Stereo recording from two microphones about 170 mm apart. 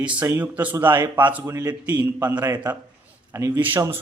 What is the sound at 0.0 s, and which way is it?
A man's voice, 10° right (ahead or behind).